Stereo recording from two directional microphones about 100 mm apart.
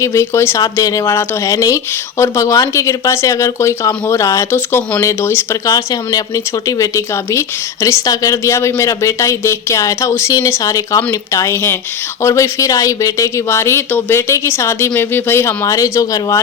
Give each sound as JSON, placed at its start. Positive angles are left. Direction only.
{"t": 0.0, "sound": "speech", "side_deg": 30}
{"t": 5.6, "sound": "speech", "side_deg": 40}